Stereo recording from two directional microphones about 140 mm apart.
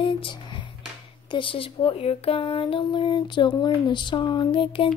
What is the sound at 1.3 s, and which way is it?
Speech, 40° left (ahead or behind).